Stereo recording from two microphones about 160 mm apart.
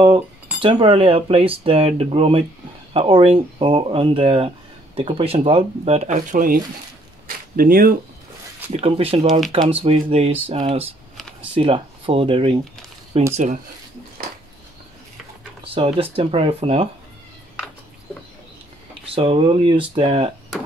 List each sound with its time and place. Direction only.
0.6 s speech: 30° right (ahead or behind); by 6.6 s 60° right (ahead or behind)
7.2 s a sound: 60° right (ahead or behind)
8.8 s speech: 35° right (ahead or behind)
15.6 s speech: 35° right (ahead or behind)
19.1 s speech: 35° right (ahead or behind)